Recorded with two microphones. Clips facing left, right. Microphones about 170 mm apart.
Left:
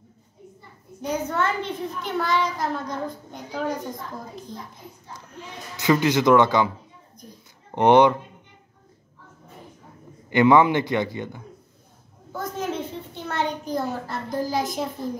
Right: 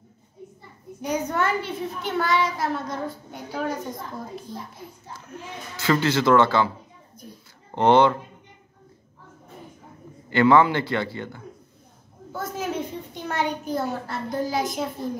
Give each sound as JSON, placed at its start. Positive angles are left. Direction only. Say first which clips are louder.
{"t": 1.0, "sound": "a child's voice", "louder": "even", "side_deg": -10}
{"t": 5.8, "sound": "a man's voice", "louder": "left 2 dB", "side_deg": 15}
{"t": 7.7, "sound": "a man's voice", "louder": "left 2 dB", "side_deg": 15}
{"t": 10.3, "sound": "a man's voice", "louder": "left 1 dB", "side_deg": 15}
{"t": 12.3, "sound": "a sound", "louder": "left 1 dB", "side_deg": -5}